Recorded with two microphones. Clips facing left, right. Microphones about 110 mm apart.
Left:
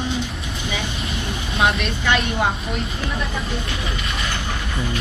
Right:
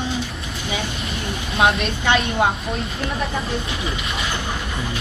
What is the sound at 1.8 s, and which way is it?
Speech, 30° right (ahead or behind).